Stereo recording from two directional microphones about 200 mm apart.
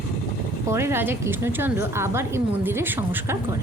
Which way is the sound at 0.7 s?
15° right (ahead or behind).